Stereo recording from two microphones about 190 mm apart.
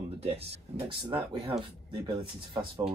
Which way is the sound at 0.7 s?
30° right (ahead or behind).